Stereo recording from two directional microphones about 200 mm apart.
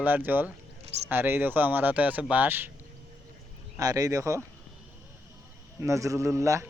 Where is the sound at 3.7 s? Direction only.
15° right (ahead or behind).